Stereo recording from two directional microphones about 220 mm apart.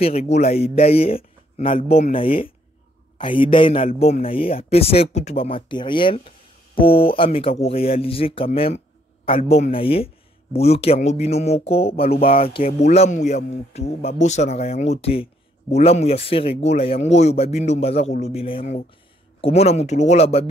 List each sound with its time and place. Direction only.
0.0 s speech: 30° left (ahead or behind)